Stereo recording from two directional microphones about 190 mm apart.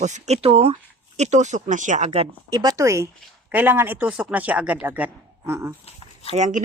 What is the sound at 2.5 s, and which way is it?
Speech, 20° right (ahead or behind).